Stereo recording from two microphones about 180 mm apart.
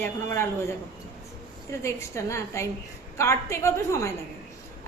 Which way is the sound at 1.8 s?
15° left (ahead or behind).